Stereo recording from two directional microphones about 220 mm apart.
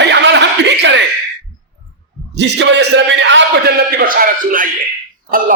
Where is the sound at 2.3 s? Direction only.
50° right (ahead or behind).